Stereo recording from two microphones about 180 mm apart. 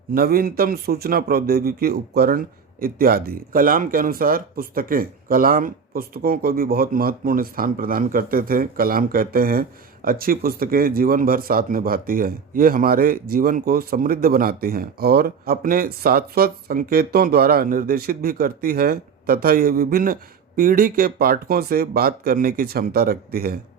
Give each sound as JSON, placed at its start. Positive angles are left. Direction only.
{"t": 0.1, "sound": "speech", "side_deg": -55}